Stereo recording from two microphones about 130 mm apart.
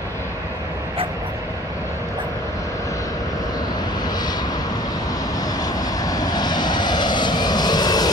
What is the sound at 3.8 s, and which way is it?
Vehicle, 30° left (ahead or behind).